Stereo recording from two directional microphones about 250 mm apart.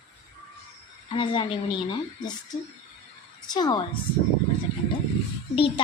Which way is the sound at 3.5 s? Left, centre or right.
Centre.